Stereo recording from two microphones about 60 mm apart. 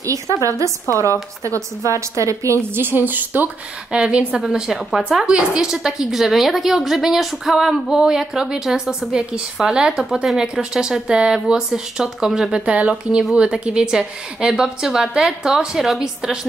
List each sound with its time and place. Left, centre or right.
0.0 s a woman's voice: right
2.7 s a woman's voice: right
4.4 s a woman's voice: centre